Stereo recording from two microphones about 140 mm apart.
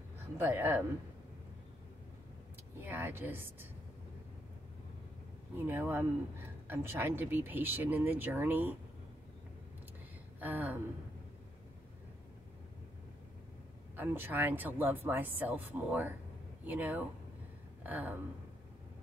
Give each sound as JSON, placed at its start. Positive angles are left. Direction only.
{"t": 0.4, "sound": "speech", "side_deg": -15}
{"t": 2.8, "sound": "speech", "side_deg": -15}
{"t": 5.6, "sound": "speech", "side_deg": -15}
{"t": 10.4, "sound": "speech", "side_deg": -15}
{"t": 13.9, "sound": "speech", "side_deg": -15}